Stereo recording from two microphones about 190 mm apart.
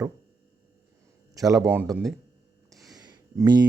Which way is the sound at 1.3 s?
20° right (ahead or behind).